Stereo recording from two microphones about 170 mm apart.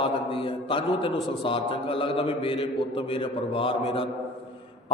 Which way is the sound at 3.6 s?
35° left (ahead or behind).